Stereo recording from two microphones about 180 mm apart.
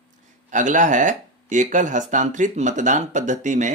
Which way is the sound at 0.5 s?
45° right (ahead or behind).